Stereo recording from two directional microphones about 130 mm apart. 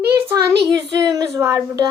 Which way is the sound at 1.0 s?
30° right (ahead or behind).